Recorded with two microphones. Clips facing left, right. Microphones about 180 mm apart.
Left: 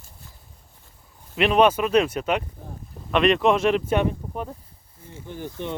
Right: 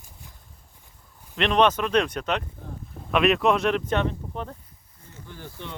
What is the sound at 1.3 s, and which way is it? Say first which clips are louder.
Speech: left 3 dB; 5° left (ahead or behind).